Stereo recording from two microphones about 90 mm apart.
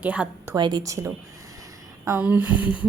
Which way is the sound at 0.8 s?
35° right (ahead or behind).